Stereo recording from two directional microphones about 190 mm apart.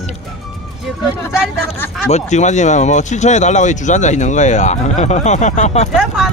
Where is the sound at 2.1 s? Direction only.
35° left (ahead or behind).